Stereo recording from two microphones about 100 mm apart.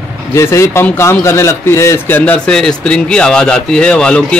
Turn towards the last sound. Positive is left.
turn(degrees=10)  # may be behind; listen again after turning